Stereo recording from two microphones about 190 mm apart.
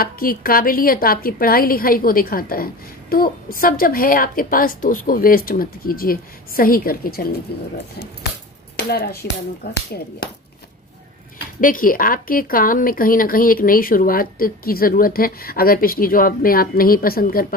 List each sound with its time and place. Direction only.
0.0 s a woman's voice: 50° left (ahead or behind)
11.6 s a woman's voice: 45° left (ahead or behind)